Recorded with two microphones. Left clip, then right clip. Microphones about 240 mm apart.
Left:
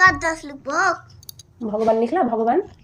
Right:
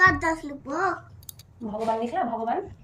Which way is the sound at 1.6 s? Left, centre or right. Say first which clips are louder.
Left 8 dB; centre.